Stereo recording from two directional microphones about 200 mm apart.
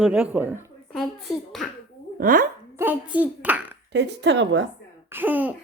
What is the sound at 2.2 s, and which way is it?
Speech, 45° right (ahead or behind).